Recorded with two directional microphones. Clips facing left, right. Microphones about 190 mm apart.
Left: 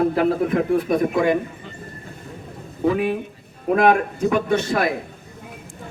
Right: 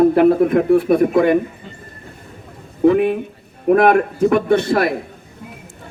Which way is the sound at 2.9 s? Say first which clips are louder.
Right 5 dB; 55° right (ahead or behind).